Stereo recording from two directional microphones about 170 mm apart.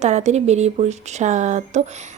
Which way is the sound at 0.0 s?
45° right (ahead or behind).